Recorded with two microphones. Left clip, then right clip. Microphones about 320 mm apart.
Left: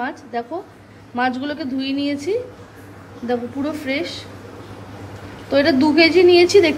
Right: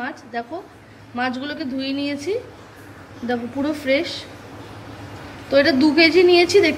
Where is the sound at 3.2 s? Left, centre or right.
Centre.